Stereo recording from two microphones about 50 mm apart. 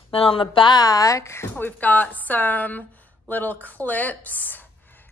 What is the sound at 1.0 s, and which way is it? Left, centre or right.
Speech, left.